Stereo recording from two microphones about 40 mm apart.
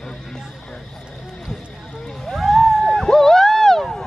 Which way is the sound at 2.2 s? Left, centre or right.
Centre.